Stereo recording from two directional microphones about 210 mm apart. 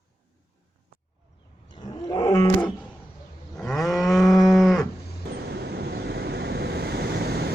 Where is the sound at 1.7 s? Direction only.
20° left (ahead or behind).